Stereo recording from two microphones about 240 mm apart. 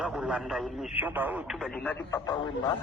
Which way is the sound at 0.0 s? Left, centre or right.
Centre.